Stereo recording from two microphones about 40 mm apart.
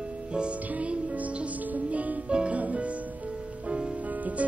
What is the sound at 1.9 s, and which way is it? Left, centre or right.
Music, right.